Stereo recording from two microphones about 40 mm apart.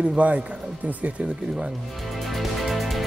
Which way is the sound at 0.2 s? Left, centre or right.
Right.